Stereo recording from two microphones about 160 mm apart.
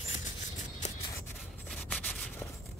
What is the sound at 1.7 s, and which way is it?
Rub, 5° left (ahead or behind).